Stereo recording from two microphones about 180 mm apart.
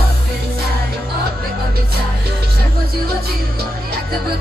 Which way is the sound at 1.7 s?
55° right (ahead or behind).